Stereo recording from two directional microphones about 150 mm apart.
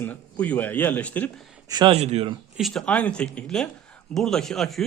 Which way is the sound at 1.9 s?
45° right (ahead or behind).